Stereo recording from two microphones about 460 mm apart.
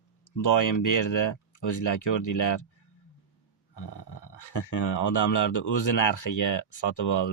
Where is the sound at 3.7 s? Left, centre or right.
Left.